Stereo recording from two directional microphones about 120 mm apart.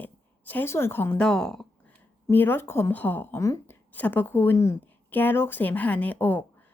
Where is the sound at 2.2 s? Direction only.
15° left (ahead or behind).